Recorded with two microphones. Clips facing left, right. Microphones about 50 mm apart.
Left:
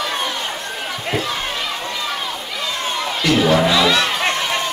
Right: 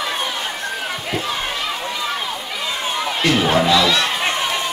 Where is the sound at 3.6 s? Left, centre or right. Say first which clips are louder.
Even; centre.